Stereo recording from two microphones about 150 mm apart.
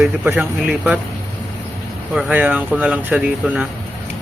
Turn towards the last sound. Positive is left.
turn(degrees=-10)  # may be behind; listen again after turning